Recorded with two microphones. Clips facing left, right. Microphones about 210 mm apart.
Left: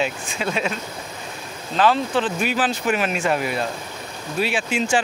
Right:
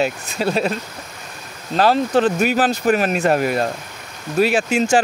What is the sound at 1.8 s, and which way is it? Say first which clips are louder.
Speech: right 4 dB; 40° right (ahead or behind).